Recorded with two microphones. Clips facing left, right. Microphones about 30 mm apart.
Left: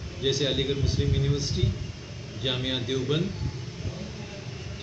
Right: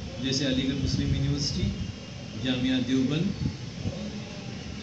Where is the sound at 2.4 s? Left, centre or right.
Left.